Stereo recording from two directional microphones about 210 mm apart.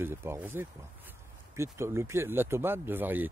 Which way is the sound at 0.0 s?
10° right (ahead or behind).